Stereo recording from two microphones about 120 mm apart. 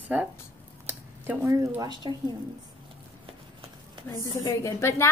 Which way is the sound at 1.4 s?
25° right (ahead or behind).